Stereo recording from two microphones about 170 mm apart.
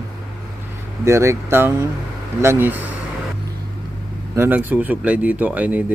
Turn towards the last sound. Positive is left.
turn(degrees=-10)  # may be behind; listen again after turning